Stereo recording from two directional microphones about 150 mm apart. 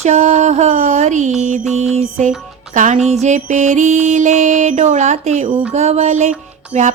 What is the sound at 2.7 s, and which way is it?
Music, 55° right (ahead or behind).